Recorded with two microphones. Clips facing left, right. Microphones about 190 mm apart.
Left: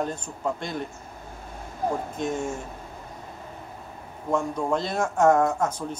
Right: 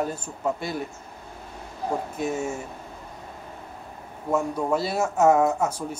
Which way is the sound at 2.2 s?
5° right (ahead or behind).